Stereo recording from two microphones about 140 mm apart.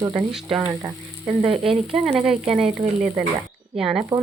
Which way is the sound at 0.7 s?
25° right (ahead or behind).